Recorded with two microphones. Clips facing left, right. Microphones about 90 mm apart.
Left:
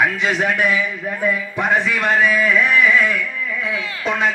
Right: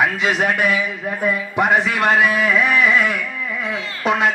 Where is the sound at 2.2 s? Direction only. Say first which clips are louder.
Left 1 dB; 65° right (ahead or behind).